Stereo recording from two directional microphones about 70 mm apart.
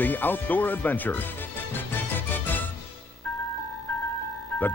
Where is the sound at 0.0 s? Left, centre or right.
Left.